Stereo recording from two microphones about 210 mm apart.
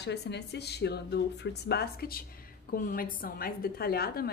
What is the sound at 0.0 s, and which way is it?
Speech, 55° left (ahead or behind).